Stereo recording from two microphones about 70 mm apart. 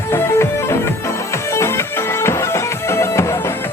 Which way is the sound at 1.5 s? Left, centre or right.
Left.